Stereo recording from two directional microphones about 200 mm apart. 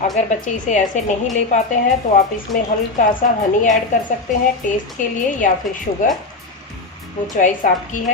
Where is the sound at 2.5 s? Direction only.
Centre (ahead or behind).